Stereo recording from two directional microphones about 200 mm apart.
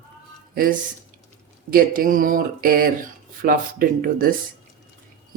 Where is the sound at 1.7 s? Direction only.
45° right (ahead or behind).